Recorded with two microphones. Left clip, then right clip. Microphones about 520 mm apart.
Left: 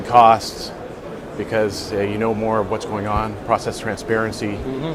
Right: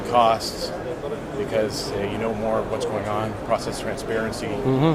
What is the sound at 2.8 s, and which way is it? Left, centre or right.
Speech, left.